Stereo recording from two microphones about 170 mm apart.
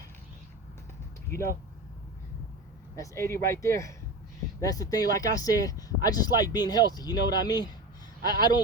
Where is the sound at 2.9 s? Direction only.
15° left (ahead or behind).